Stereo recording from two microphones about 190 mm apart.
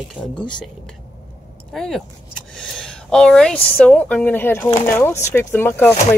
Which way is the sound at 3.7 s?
5° left (ahead or behind).